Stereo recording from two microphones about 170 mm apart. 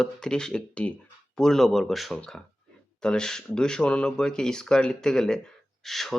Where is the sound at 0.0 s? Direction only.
5° left (ahead or behind).